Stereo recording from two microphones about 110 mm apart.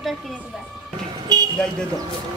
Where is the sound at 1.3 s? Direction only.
35° right (ahead or behind).